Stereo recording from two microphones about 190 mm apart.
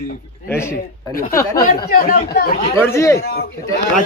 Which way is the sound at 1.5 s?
50° left (ahead or behind).